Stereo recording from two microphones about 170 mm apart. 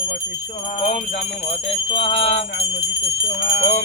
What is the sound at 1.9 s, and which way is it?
Jingle bell, 30° left (ahead or behind).